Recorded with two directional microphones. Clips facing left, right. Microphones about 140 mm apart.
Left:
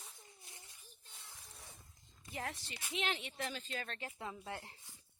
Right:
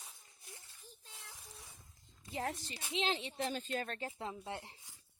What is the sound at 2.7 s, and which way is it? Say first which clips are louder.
Speech: right 2 dB; 25° right (ahead or behind).